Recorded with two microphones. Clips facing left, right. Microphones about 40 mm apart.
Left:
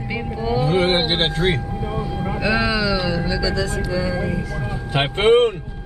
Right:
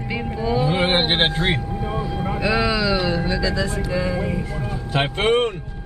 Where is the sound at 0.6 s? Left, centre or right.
Centre.